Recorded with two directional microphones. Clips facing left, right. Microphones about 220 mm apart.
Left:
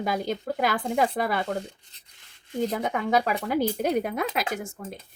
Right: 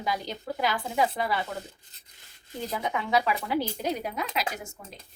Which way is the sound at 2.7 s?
45° left (ahead or behind).